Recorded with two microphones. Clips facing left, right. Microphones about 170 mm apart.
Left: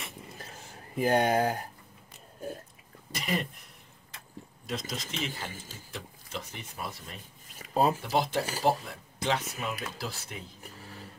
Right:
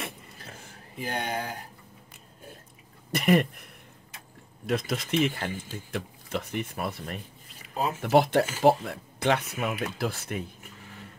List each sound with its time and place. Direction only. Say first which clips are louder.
0.9 s speech: left 7 dB; 45° left (ahead or behind)
3.1 s speech: right 10 dB; 60° right (ahead or behind)
4.6 s speech: right 8 dB; 60° right (ahead or behind)
7.6 s a sound: left 4 dB; 35° left (ahead or behind)
8.0 s speech: right 7 dB; 60° right (ahead or behind)